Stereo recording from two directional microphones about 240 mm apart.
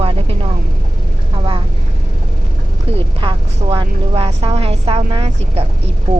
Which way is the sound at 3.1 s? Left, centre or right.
Centre.